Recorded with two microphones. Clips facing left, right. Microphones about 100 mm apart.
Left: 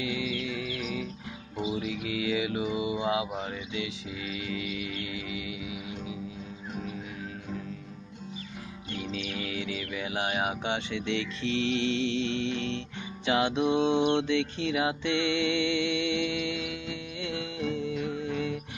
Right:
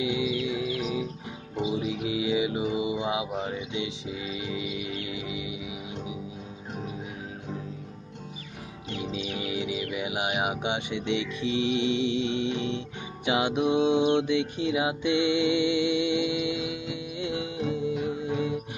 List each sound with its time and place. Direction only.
0.0 s music: 20° right (ahead or behind)
8.9 s music: 20° right (ahead or behind)